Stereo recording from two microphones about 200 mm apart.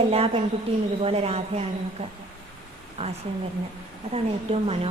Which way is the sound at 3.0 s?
30° right (ahead or behind).